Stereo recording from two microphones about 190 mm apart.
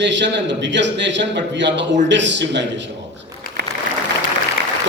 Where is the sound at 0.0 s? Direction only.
70° right (ahead or behind).